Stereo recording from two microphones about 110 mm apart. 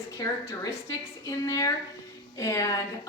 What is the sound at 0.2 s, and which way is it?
A woman's voice, 30° left (ahead or behind).